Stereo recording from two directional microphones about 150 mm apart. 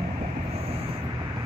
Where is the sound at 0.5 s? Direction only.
40° right (ahead or behind).